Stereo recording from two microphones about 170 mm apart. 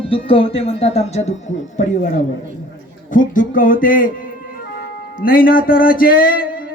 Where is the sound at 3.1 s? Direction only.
50° left (ahead or behind).